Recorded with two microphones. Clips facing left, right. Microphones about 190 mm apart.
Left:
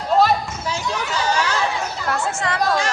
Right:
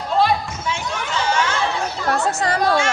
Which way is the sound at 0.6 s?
35° left (ahead or behind).